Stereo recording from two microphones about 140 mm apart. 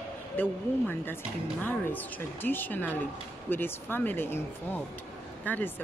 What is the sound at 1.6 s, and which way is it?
Speech, 15° left (ahead or behind).